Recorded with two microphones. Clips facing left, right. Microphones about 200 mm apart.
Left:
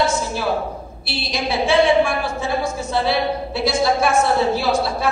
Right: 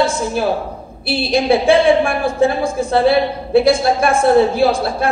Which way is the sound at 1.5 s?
50° right (ahead or behind).